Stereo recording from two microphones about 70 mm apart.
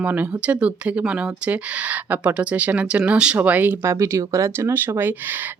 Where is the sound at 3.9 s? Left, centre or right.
Right.